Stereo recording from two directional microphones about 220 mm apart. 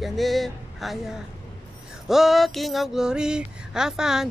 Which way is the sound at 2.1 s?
Centre (ahead or behind).